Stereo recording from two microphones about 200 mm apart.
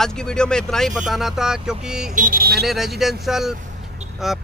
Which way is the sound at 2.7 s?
Centre (ahead or behind).